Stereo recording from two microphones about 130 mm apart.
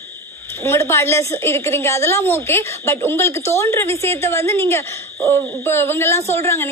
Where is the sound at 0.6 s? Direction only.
20° left (ahead or behind).